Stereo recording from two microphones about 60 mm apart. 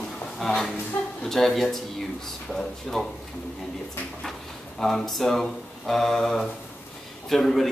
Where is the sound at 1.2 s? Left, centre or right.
Centre.